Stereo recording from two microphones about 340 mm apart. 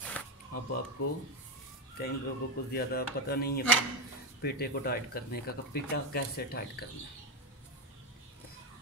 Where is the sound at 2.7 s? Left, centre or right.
Left.